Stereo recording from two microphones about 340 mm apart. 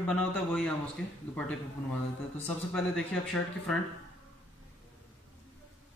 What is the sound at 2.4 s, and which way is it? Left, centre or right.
Speech, centre.